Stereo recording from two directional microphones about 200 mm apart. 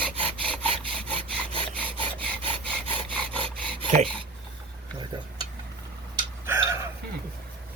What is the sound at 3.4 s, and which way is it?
Rub, 25° right (ahead or behind).